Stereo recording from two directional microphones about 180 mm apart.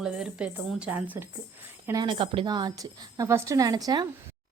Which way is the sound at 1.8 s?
20° right (ahead or behind).